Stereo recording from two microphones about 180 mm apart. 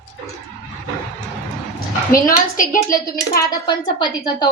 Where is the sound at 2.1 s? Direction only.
50° left (ahead or behind).